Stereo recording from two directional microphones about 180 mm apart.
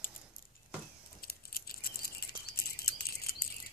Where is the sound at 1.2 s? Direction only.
55° left (ahead or behind).